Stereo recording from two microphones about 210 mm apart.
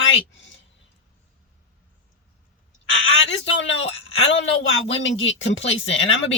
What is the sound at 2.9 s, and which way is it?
Speech, 65° left (ahead or behind).